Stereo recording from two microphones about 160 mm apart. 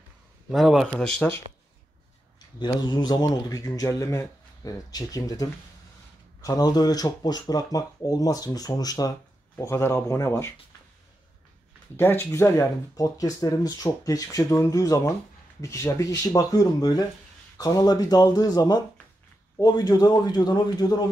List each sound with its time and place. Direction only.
0.5 s speech: centre (ahead or behind)
2.6 s speech: 25° left (ahead or behind)
12.0 s speech: 15° left (ahead or behind)